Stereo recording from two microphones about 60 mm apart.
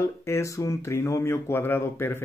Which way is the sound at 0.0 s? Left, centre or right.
Left.